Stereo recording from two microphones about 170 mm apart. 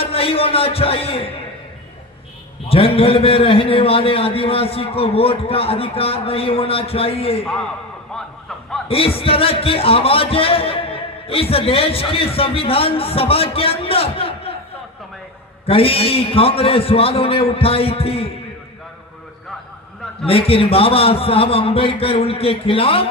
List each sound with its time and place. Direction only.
0.0 s a man's voice: 35° left (ahead or behind)
2.7 s speech: 35° left (ahead or behind)
8.1 s a sound: 5° left (ahead or behind)
8.8 s speech: 35° left (ahead or behind)
15.6 s speech: 35° left (ahead or behind)
20.2 s speech: 35° left (ahead or behind)